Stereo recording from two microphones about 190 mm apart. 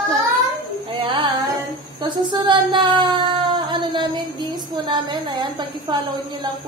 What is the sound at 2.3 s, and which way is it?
A woman's voice, 25° right (ahead or behind).